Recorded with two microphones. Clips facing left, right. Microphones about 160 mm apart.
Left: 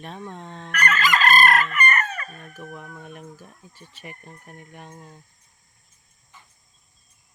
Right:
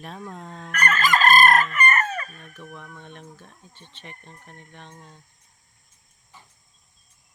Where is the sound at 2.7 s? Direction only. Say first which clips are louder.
Left 3 dB; 5° left (ahead or behind).